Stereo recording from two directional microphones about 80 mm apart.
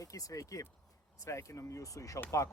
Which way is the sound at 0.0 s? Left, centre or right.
Left.